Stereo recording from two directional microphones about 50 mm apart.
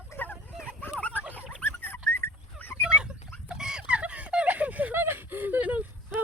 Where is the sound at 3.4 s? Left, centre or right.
Centre; by 5.8 s right.